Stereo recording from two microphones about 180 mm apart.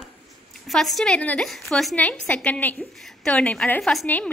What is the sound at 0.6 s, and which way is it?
A woman's voice, centre (ahead or behind).